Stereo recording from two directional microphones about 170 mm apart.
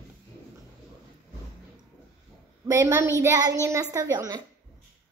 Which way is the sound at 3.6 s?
20° right (ahead or behind).